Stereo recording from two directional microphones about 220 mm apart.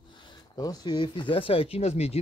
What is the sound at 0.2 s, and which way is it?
Speech, 15° left (ahead or behind).